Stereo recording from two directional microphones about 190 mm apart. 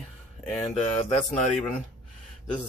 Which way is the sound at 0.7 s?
35° left (ahead or behind).